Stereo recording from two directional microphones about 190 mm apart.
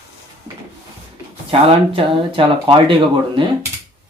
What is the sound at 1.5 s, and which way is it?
Speech, 25° right (ahead or behind).